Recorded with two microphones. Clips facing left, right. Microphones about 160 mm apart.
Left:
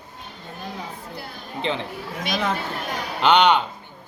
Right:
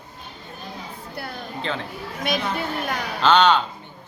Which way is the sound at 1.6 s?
20° left (ahead or behind).